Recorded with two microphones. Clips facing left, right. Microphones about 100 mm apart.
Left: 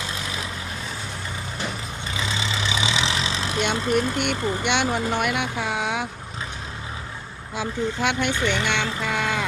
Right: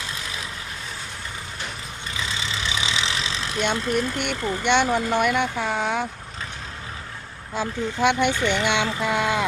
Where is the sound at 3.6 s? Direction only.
Centre (ahead or behind).